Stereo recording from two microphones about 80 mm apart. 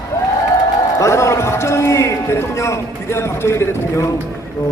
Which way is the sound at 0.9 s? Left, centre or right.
Left.